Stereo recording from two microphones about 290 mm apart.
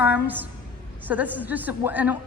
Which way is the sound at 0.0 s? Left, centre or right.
Centre.